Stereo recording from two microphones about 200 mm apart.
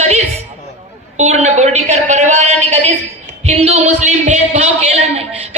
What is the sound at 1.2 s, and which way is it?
Speech, 35° right (ahead or behind).